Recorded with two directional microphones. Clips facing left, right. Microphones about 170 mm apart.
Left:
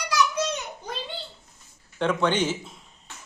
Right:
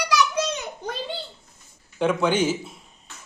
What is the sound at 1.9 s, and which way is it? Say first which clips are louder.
Speech: right 2 dB; 10° right (ahead or behind).